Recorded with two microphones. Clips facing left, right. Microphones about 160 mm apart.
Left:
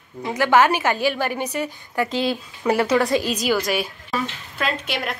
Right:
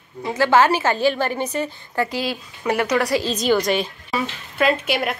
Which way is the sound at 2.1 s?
Centre (ahead or behind).